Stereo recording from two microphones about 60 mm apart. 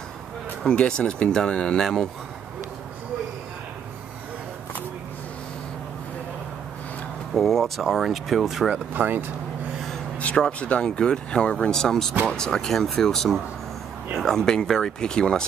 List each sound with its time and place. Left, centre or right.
0.7 s speech: centre
7.3 s speech: centre
8.7 s speech: right
10.3 s speech: centre